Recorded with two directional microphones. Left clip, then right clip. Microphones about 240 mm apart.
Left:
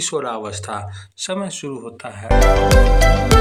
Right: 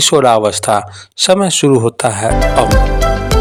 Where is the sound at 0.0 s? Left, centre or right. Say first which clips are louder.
Right 14 dB; right.